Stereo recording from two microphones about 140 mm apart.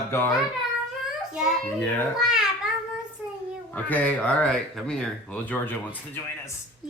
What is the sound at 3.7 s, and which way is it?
Speech, 10° left (ahead or behind).